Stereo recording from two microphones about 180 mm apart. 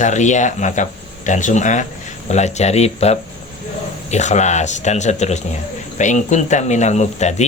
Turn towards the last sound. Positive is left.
turn(degrees=40)  # may be behind; listen again after turning